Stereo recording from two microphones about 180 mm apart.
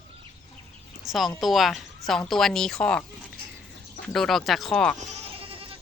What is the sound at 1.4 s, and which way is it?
A woman's voice, centre (ahead or behind).